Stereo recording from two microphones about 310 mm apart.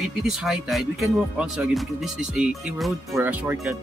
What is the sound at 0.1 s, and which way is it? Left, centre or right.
Speech, centre.